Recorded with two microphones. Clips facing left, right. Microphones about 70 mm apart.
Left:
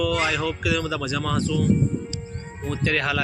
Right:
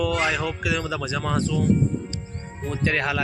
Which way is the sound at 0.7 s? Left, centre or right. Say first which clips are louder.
Left 1 dB; centre.